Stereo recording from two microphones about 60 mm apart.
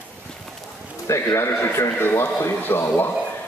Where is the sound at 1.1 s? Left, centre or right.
Left.